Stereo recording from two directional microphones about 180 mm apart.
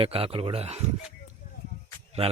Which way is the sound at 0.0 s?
30° right (ahead or behind).